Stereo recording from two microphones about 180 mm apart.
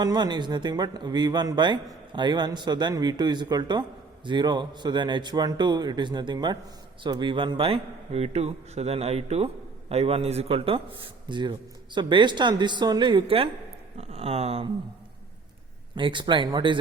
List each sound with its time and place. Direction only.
0.0 s speech: 25° right (ahead or behind)
16.0 s speech: 25° right (ahead or behind)